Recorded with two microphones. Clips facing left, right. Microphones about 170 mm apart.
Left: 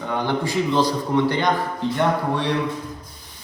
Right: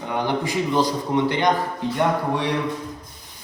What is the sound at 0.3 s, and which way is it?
Speech, 15° right (ahead or behind).